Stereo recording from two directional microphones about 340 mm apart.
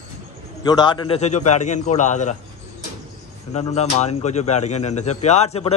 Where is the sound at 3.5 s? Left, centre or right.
Centre.